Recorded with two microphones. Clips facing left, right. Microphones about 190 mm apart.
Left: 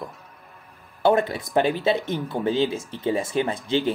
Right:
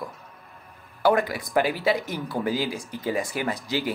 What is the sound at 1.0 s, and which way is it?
Speech, 25° left (ahead or behind).